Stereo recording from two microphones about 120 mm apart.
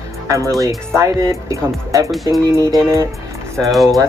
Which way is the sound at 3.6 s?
Centre (ahead or behind).